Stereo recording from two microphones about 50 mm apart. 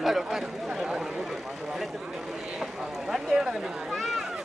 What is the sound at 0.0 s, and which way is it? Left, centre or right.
Speech, centre.